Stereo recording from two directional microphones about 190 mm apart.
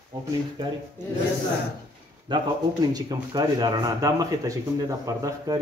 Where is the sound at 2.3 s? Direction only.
25° right (ahead or behind).